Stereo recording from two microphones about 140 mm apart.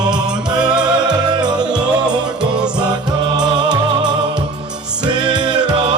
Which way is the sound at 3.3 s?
30° right (ahead or behind).